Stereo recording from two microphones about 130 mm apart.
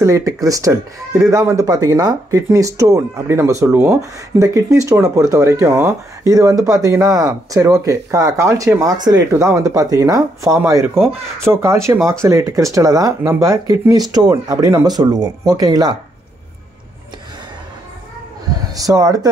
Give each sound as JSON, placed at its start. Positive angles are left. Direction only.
{"t": 0.0, "sound": "speech", "side_deg": -25}
{"t": 9.3, "sound": "speech", "side_deg": -20}
{"t": 18.8, "sound": "speech", "side_deg": -25}